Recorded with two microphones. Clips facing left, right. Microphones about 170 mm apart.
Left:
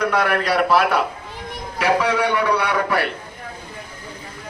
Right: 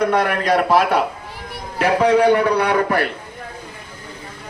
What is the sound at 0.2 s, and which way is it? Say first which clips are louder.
Speech: right 1 dB; 40° right (ahead or behind).